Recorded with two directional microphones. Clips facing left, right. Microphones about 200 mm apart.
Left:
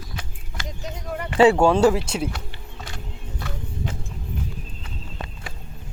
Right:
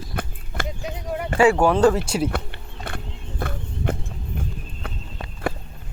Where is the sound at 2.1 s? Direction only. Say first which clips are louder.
Right 3 dB; 5° right (ahead or behind).